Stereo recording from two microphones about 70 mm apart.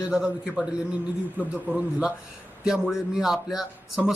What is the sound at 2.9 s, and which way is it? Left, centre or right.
Speech, centre.